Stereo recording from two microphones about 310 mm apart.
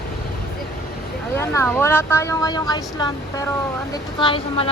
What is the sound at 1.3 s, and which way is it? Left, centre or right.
A woman's voice, centre.